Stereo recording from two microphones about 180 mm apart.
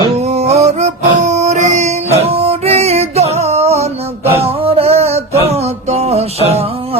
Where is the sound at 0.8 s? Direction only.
40° right (ahead or behind).